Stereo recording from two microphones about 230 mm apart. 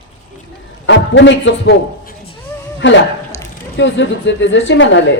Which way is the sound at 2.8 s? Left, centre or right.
Left.